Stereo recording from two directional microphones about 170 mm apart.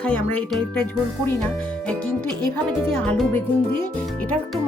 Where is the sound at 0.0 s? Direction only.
10° left (ahead or behind).